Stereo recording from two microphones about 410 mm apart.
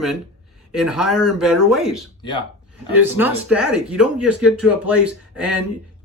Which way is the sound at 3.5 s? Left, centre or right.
Left.